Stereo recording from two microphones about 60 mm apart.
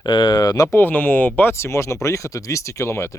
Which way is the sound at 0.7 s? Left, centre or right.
Left.